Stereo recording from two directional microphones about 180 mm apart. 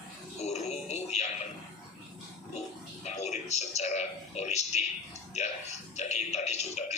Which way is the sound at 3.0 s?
40° left (ahead or behind).